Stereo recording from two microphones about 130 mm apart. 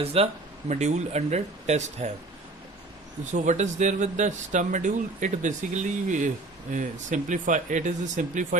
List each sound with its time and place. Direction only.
0.0 s speech: 50° right (ahead or behind)
0.7 s speech: 60° right (ahead or behind)
3.3 s speech: 70° right (ahead or behind)